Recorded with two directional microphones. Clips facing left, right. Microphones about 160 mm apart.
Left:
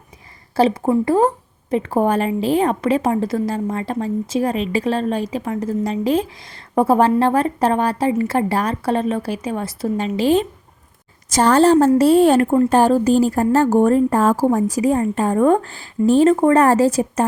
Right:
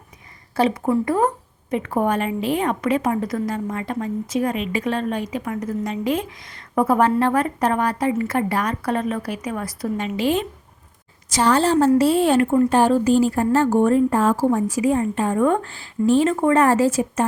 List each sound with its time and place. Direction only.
0.5 s a woman's voice: 30° left (ahead or behind)
11.3 s a woman's voice: 45° left (ahead or behind)